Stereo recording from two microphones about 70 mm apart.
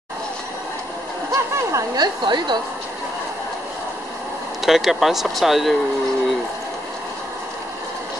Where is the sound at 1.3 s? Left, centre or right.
Right.